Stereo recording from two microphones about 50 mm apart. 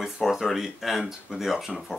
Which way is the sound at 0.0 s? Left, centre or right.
Centre.